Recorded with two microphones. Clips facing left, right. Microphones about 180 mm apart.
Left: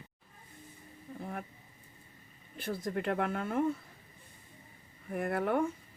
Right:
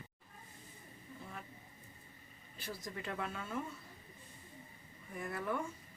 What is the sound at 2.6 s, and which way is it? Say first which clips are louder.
Speech: left 10 dB; 55° left (ahead or behind).